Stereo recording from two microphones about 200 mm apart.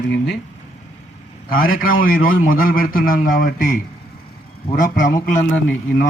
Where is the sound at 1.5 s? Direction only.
45° left (ahead or behind).